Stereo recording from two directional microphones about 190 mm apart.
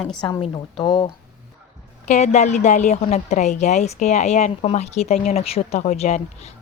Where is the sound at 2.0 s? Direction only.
35° left (ahead or behind).